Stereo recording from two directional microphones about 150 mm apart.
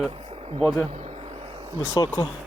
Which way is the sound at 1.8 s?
20° left (ahead or behind).